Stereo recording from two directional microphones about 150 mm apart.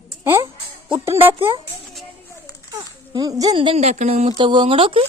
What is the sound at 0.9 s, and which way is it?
Speech, 20° right (ahead or behind).